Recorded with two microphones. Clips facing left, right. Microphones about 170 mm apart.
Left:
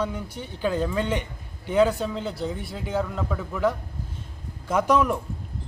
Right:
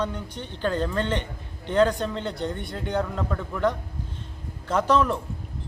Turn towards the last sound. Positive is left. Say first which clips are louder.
# even
turn(degrees=10)  # may be behind; listen again after turning